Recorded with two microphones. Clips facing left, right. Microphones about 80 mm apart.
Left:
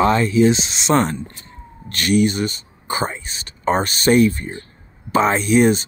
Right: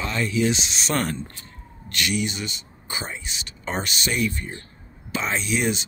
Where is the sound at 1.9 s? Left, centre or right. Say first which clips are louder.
Left 9 dB; left.